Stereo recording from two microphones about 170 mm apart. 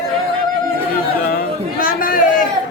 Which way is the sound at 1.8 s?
55° left (ahead or behind).